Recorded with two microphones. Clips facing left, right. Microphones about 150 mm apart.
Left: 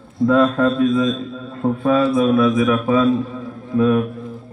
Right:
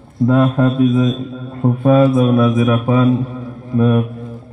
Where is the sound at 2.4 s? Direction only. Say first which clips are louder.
Right 2 dB; 20° right (ahead or behind).